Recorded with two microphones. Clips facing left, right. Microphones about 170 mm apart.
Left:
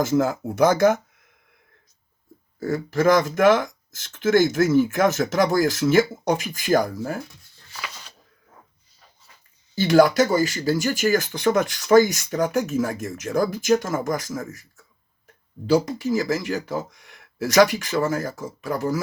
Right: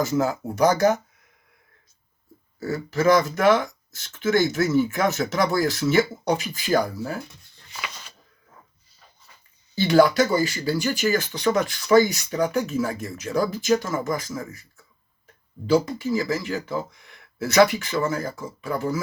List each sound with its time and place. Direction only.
0.0 s speech: 50° left (ahead or behind)
2.6 s speech: 50° left (ahead or behind)
7.9 s a sound: centre (ahead or behind)
9.7 s speech: 45° left (ahead or behind)